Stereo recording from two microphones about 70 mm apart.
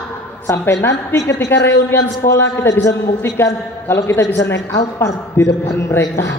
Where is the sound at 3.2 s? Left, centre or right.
Left.